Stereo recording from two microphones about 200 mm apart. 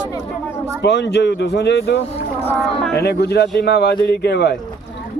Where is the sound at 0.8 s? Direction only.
55° left (ahead or behind).